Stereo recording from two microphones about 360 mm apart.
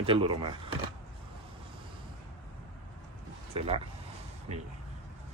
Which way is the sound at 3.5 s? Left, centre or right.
Centre.